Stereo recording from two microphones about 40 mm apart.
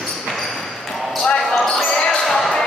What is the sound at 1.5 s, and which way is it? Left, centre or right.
Basketball bounce, centre.